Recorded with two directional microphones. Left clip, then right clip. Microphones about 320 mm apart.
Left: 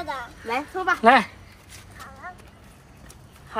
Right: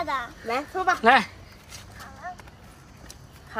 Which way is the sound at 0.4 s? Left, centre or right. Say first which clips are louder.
Even; centre.